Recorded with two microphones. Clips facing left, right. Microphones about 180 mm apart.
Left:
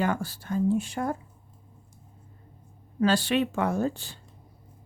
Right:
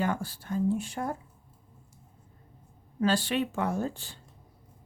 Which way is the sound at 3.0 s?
75° left (ahead or behind).